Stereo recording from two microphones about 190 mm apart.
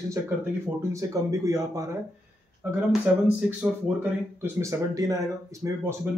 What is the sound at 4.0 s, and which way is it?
Speech, 15° right (ahead or behind).